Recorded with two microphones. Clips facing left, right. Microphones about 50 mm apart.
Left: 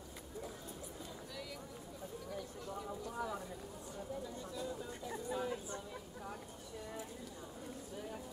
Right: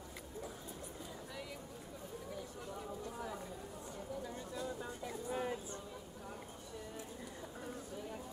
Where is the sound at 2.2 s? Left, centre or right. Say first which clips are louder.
Left 2 dB; centre.